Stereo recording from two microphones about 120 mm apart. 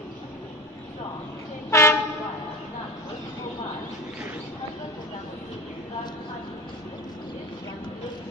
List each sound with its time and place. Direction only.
1.7 s train: 20° left (ahead or behind)